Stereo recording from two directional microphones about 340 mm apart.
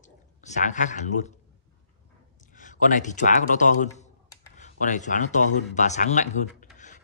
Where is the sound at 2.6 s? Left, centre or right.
Left.